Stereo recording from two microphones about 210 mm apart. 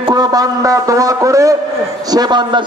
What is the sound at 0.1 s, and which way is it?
A man's voice, 20° right (ahead or behind).